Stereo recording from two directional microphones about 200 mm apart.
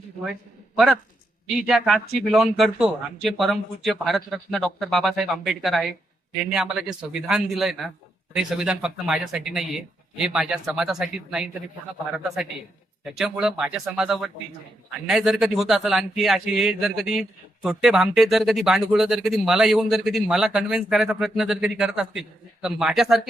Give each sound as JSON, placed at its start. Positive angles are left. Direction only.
{"t": 1.6, "sound": "speech", "side_deg": 0}
{"t": 13.1, "sound": "speech", "side_deg": 0}